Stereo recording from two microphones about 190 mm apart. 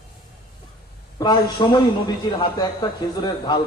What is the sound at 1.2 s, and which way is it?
A man's voice, 20° left (ahead or behind).